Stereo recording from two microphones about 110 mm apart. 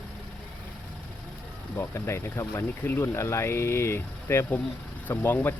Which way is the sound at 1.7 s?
25° left (ahead or behind).